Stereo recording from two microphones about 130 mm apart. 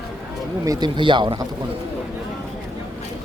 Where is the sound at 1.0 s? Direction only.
35° right (ahead or behind).